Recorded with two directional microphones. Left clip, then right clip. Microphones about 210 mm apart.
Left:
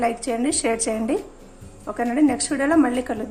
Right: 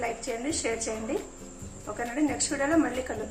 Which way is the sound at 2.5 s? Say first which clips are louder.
Left 7 dB; 45° left (ahead or behind).